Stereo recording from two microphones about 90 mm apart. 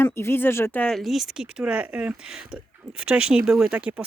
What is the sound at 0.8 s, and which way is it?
Speech, centre (ahead or behind).